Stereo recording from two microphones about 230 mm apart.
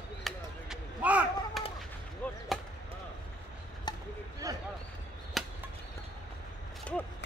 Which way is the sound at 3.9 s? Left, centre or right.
Centre.